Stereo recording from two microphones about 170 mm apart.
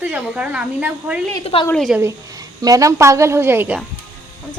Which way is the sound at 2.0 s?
20° right (ahead or behind).